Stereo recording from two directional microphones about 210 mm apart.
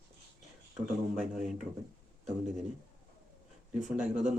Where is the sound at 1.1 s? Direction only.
Centre (ahead or behind).